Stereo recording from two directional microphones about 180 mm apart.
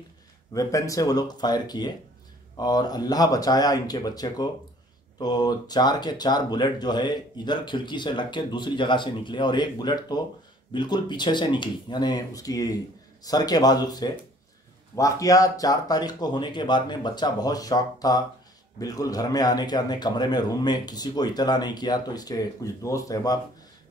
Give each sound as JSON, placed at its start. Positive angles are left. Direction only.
{"t": 0.5, "sound": "speech", "side_deg": 20}